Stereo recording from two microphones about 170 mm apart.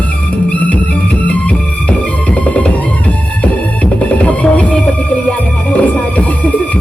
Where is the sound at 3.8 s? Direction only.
5° left (ahead or behind).